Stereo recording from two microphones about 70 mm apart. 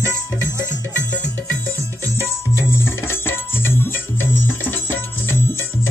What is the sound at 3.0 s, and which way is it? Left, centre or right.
Music, left.